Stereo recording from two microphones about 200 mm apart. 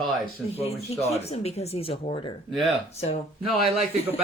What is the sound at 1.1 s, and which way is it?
A woman's voice, 30° left (ahead or behind).